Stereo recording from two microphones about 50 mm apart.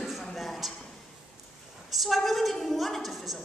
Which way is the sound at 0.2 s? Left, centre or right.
Centre.